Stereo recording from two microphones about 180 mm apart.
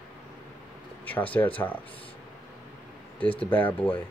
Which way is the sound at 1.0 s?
10° left (ahead or behind).